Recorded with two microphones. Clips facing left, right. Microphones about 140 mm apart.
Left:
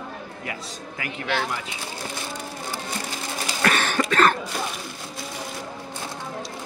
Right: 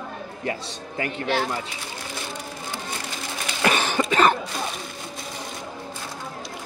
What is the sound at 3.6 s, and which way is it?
Cough, 15° right (ahead or behind).